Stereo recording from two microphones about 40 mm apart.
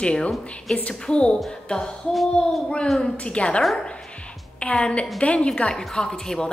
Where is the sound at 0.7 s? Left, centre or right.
Centre.